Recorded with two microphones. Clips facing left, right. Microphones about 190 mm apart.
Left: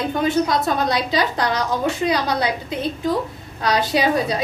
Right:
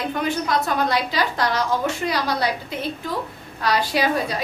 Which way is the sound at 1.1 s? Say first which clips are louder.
Left 2 dB; 20° left (ahead or behind).